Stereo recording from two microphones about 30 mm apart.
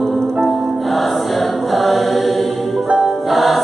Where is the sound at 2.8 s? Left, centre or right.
Centre.